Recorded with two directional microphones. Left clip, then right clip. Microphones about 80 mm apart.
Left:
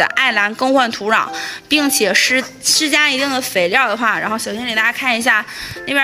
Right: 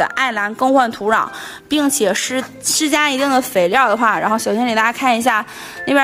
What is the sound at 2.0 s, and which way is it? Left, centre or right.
Speech, right.